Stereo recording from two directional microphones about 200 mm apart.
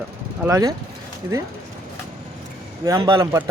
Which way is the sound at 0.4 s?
15° right (ahead or behind).